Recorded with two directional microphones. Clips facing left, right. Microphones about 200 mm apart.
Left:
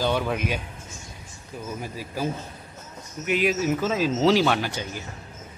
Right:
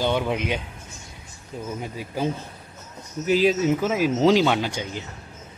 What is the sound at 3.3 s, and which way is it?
Speech, 30° right (ahead or behind).